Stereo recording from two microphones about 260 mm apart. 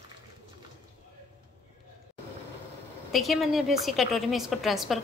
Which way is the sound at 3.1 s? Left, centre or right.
Centre.